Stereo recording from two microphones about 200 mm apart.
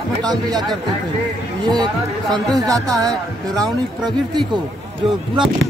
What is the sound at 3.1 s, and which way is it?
Speech, 5° left (ahead or behind).